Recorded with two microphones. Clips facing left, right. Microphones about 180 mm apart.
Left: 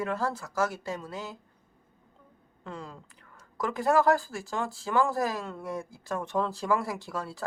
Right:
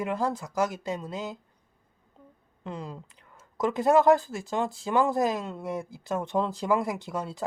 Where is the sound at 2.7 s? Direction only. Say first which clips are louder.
Right 4 dB; 20° right (ahead or behind).